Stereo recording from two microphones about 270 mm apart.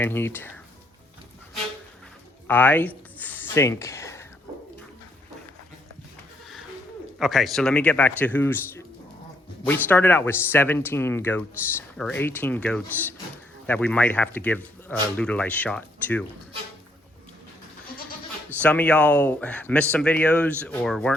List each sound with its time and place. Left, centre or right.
0.0 s speech: centre
2.5 s speech: centre
3.2 s a sound: centre
7.2 s speech: centre
18.6 s speech: centre